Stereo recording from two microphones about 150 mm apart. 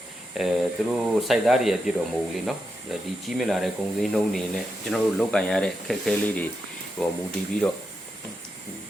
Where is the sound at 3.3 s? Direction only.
Centre (ahead or behind).